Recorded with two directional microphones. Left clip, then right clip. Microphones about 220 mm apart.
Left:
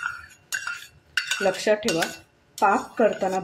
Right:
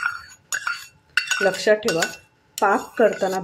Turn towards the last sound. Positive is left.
turn(degrees=-15)  # may be behind; listen again after turning